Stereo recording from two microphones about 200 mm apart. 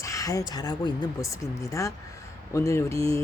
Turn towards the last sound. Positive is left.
turn(degrees=15)  # may be behind; listen again after turning